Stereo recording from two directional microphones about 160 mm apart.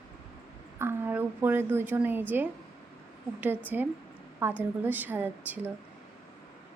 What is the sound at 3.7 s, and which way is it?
A woman's voice, 10° right (ahead or behind).